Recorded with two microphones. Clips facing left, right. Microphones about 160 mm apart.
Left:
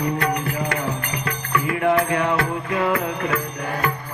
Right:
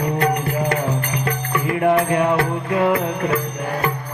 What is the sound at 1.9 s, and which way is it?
Music, 30° right (ahead or behind).